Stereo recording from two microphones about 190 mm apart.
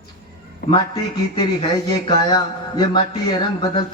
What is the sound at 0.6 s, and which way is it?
Speech, 50° left (ahead or behind).